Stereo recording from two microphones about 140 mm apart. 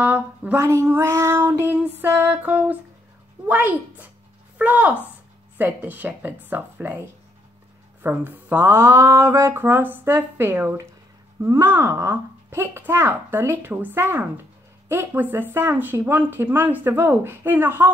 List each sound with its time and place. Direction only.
0.0 s speech: 10° right (ahead or behind)
4.6 s speech: 10° right (ahead or behind)
8.0 s speech: 10° right (ahead or behind)